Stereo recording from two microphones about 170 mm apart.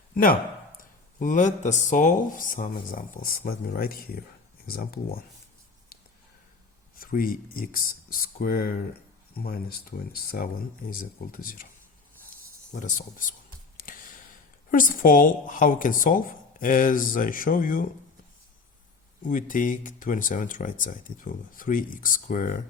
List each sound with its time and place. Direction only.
0.1 s speech: 55° left (ahead or behind)
6.9 s speech: 55° left (ahead or behind)
12.7 s speech: 50° left (ahead or behind)
13.7 s a sound: 55° left (ahead or behind)
14.7 s speech: 55° left (ahead or behind)
19.3 s speech: 50° left (ahead or behind)